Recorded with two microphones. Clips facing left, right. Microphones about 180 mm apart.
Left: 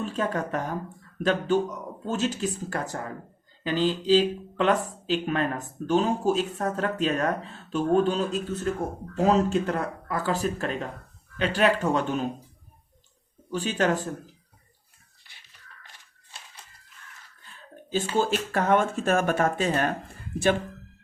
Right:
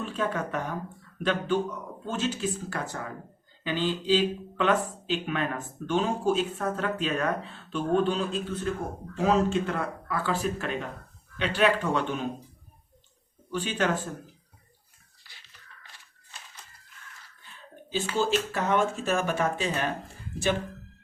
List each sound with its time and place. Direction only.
0.0 s speech: 40° left (ahead or behind)
13.5 s speech: 40° left (ahead or behind)
18.2 s speech: 50° left (ahead or behind)